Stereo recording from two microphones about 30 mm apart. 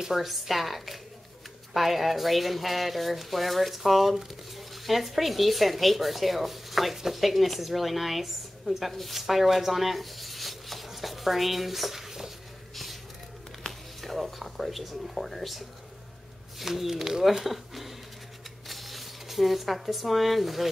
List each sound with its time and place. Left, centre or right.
0.1 s speech: centre
13.6 s a sound: centre
14.1 s speech: centre
16.9 s speech: centre
17.5 s speech: centre